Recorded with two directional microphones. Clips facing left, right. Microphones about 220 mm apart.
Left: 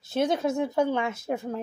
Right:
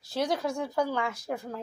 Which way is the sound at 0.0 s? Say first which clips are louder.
Left 4 dB; 25° left (ahead or behind).